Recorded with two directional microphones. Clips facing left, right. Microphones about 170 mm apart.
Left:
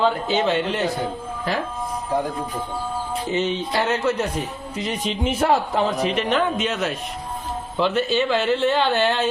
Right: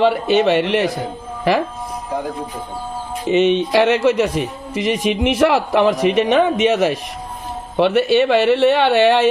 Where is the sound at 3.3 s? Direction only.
75° right (ahead or behind); by 5.9 s 90° right.